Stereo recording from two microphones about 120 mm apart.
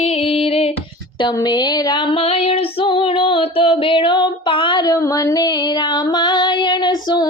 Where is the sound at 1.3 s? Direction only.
35° left (ahead or behind).